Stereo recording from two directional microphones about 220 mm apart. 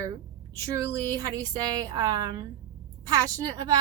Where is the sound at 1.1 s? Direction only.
15° right (ahead or behind).